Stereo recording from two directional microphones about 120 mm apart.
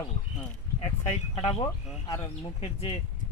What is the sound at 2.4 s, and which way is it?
Speech, 50° left (ahead or behind).